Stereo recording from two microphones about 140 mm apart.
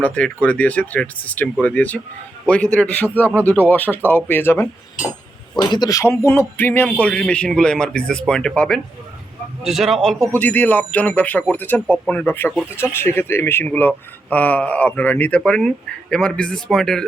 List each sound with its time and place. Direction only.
0.0 s speech: 10° left (ahead or behind)
5.5 s a man's voice: 30° left (ahead or behind); by 10.2 s centre (ahead or behind)
10.3 s speech: 10° left (ahead or behind)